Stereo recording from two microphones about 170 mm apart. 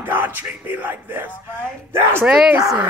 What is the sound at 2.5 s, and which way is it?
Speech, 20° right (ahead or behind).